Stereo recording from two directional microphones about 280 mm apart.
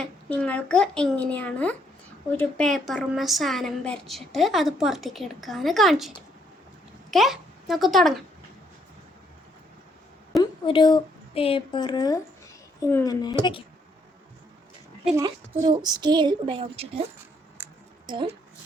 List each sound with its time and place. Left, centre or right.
0.0 s a woman's voice: centre
10.4 s a woman's voice: centre
15.0 s a woman's voice: centre